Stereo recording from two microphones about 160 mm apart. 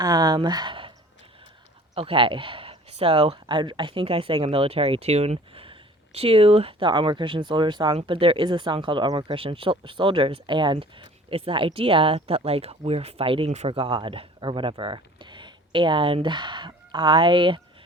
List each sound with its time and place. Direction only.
0.0 s speech: 25° right (ahead or behind)
2.0 s speech: 35° right (ahead or behind)